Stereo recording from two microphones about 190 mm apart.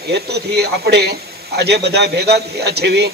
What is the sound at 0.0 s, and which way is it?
A man's voice, 60° right (ahead or behind).